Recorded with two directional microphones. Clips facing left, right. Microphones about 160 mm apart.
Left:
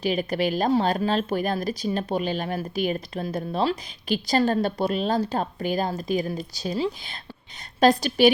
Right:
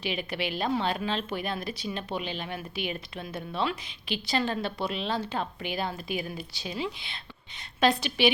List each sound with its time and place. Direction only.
0.0 s speech: 40° left (ahead or behind)